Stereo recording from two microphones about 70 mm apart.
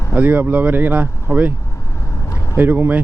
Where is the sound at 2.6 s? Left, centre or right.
Right.